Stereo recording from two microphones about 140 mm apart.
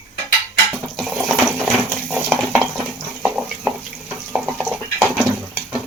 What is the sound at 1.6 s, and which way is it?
Clip-clop, 10° left (ahead or behind).